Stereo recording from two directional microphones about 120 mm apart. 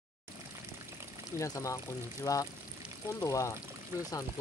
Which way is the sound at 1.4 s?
25° left (ahead or behind).